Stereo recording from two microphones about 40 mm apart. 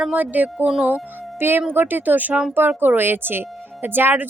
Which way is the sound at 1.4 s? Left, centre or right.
Right.